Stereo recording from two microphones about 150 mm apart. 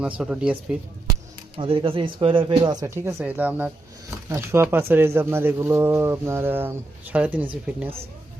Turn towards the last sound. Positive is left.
turn(degrees=-10)  # may be behind; listen again after turning